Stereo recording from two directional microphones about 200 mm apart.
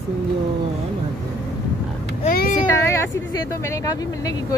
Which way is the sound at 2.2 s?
45° left (ahead or behind).